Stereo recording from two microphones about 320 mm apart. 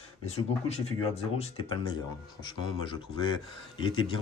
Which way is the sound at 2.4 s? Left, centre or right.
Centre.